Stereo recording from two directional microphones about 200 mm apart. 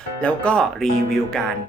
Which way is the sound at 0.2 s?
5° left (ahead or behind).